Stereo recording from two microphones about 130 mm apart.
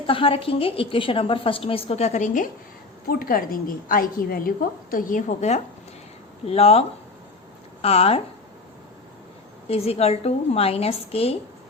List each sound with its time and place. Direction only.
0.1 s a woman's voice: 45° left (ahead or behind); by 2.5 s 75° left (ahead or behind)
3.2 s a woman's voice: 90° left; by 8.2 s 50° left (ahead or behind)
9.6 s a woman's voice: 50° left (ahead or behind)